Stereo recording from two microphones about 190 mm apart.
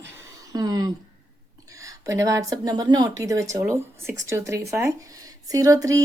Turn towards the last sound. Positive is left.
turn(degrees=-20)  # may be behind; listen again after turning